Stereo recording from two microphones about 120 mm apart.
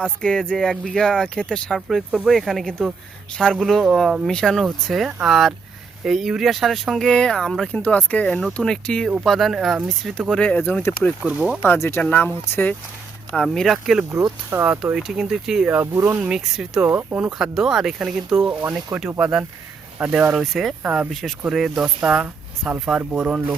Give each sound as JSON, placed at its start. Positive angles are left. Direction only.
{"t": 0.0, "sound": "speech", "side_deg": 5}
{"t": 11.2, "sound": "speech", "side_deg": -10}
{"t": 11.6, "sound": "speech", "side_deg": 20}
{"t": 13.3, "sound": "speech", "side_deg": 5}
{"t": 14.1, "sound": "speech", "side_deg": -25}
{"t": 14.9, "sound": "speech", "side_deg": -5}
{"t": 15.7, "sound": "speech", "side_deg": -20}
{"t": 16.3, "sound": "speech", "side_deg": -5}
{"t": 16.8, "sound": "speech", "side_deg": -20}
{"t": 17.2, "sound": "speech", "side_deg": -5}
{"t": 20.8, "sound": "speech", "side_deg": -10}
{"t": 21.1, "sound": "speech", "side_deg": 0}